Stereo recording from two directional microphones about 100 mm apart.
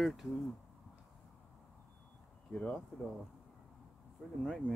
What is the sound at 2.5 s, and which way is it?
Speech, 10° left (ahead or behind).